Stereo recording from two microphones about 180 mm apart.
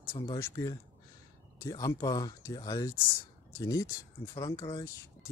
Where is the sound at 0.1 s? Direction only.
15° left (ahead or behind).